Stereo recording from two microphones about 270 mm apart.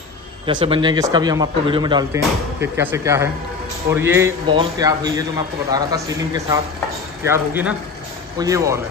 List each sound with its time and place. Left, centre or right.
0.5 s a man's voice: centre